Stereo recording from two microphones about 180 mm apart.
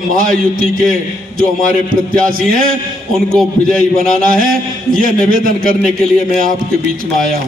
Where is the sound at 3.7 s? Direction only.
50° right (ahead or behind).